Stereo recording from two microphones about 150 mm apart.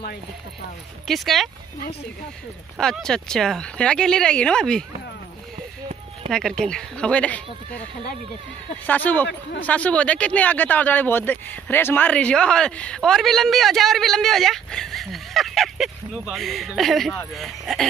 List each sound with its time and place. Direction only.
1.0 s speech: centre (ahead or behind)
2.8 s speech: 5° left (ahead or behind)
6.2 s speech: 40° right (ahead or behind)
6.6 s speech: 5° left (ahead or behind)
8.8 s speech: 10° left (ahead or behind)